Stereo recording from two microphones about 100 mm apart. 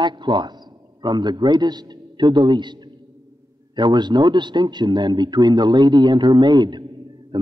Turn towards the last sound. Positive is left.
turn(degrees=-45)  # may be behind; listen again after turning